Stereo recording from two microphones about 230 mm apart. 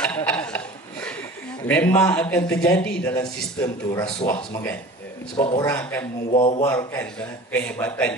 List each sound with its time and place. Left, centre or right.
0.0 s a sound: centre
1.7 s a man's voice: centre; by 5.7 s left
5.7 s a man's voice: centre
6.3 s speech: left
6.6 s a man's voice: centre